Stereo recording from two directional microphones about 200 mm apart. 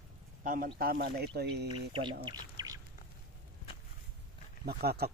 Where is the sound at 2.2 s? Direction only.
20° right (ahead or behind).